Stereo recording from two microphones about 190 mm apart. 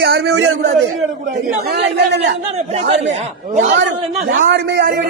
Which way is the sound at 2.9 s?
35° right (ahead or behind).